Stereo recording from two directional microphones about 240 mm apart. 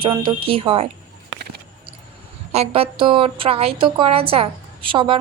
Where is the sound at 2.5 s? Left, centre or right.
Right.